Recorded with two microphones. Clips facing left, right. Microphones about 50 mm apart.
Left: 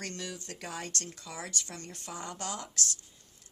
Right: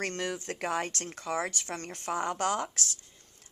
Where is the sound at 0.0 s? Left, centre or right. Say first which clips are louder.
Right 7 dB; right.